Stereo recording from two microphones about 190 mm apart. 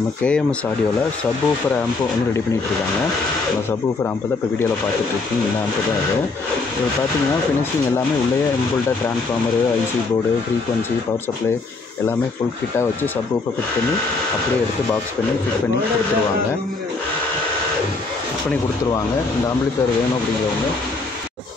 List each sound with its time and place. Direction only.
0.2 s speech: 5° left (ahead or behind)